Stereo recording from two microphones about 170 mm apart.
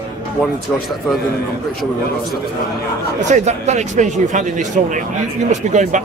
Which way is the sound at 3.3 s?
40° right (ahead or behind).